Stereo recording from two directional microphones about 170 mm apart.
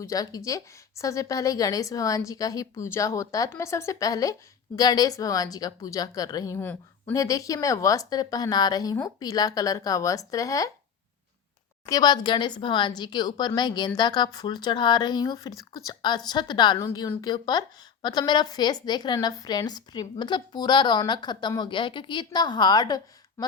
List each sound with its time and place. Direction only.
0.0 s speech: 20° left (ahead or behind)
11.9 s speech: 25° left (ahead or behind)
23.4 s a sound: 15° left (ahead or behind)